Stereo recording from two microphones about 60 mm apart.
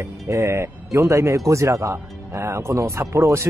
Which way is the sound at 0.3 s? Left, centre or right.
Right.